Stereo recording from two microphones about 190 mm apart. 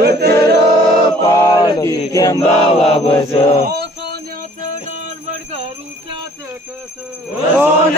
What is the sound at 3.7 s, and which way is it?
Male singing, 60° right (ahead or behind).